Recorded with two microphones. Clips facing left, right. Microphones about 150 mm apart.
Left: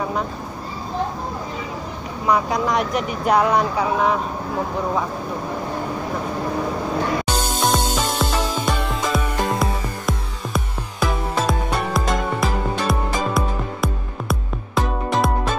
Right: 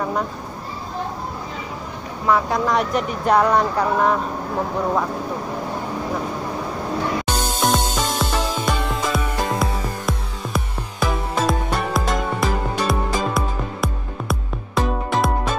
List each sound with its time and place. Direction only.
2.2 s speech: 15° left (ahead or behind)
2.7 s speech: centre (ahead or behind)
7.2 s music: 10° left (ahead or behind)